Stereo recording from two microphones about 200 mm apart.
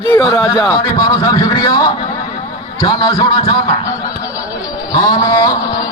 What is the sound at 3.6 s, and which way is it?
Snicker, 20° left (ahead or behind).